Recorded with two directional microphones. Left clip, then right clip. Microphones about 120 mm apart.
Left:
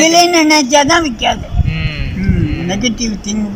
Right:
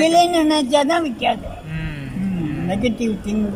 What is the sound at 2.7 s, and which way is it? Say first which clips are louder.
Speech: left 4 dB; 35° right (ahead or behind).